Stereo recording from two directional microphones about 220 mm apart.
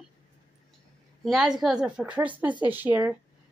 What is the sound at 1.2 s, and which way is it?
A woman's voice, centre (ahead or behind).